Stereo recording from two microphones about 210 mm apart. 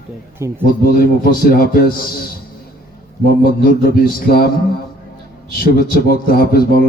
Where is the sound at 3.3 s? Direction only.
45° left (ahead or behind).